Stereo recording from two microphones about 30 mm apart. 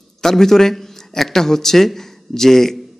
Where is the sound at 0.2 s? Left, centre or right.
Centre.